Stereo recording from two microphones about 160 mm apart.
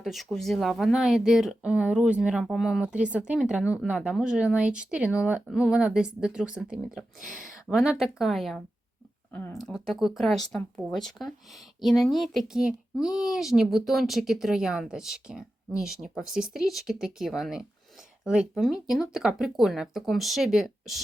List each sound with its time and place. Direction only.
0.0 s speech: centre (ahead or behind)
9.3 s speech: 15° left (ahead or behind)
9.6 s speech: centre (ahead or behind)